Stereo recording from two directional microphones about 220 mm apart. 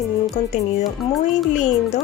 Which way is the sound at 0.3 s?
30° left (ahead or behind).